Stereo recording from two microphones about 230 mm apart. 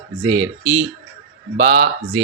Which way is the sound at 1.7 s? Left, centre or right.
Right.